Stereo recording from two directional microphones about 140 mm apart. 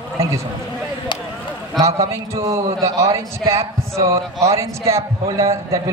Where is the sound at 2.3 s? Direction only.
20° right (ahead or behind).